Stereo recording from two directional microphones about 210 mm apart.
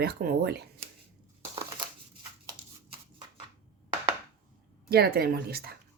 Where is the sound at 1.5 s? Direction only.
20° right (ahead or behind).